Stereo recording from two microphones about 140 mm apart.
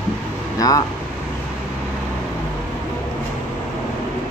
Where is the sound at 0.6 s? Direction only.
25° left (ahead or behind).